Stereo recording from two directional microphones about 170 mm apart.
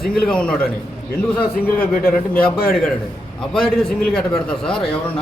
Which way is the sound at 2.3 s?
60° left (ahead or behind).